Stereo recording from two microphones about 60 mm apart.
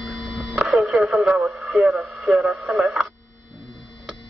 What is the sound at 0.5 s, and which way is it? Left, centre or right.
Speech, centre.